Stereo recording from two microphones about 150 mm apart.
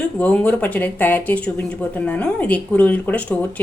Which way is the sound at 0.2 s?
10° left (ahead or behind).